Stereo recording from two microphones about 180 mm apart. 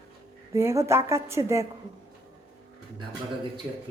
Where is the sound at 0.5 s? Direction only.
15° right (ahead or behind).